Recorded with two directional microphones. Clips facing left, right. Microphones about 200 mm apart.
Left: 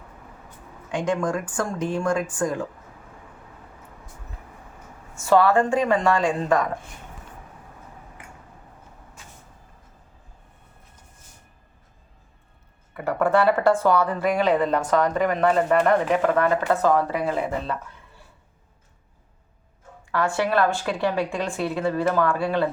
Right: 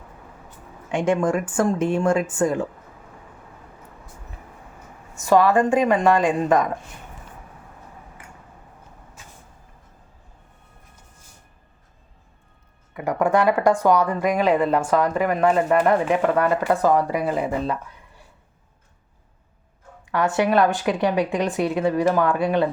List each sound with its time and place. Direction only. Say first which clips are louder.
0.9 s speech: right 4 dB; 25° right (ahead or behind)
5.1 s speech: right 1 dB; 15° right (ahead or behind)
13.1 s speech: right 1 dB; 15° right (ahead or behind)
20.1 s speech: right 3 dB; 20° right (ahead or behind)